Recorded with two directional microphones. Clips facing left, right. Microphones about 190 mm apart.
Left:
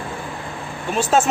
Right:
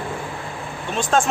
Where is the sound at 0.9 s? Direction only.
5° left (ahead or behind).